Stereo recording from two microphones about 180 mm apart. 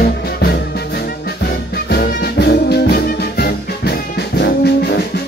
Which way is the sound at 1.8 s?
65° left (ahead or behind).